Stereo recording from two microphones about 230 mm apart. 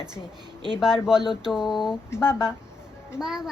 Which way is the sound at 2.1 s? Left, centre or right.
Centre.